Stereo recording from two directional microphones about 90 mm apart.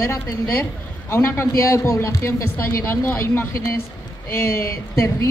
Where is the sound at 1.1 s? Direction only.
30° left (ahead or behind).